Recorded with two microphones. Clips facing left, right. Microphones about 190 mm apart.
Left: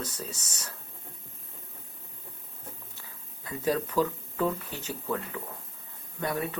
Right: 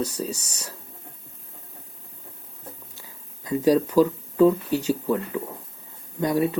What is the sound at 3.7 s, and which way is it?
Speech, 15° right (ahead or behind).